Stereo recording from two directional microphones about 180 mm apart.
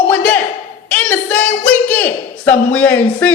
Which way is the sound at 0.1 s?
10° left (ahead or behind).